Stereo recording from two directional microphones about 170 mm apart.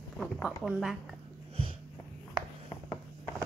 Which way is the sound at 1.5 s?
35° right (ahead or behind).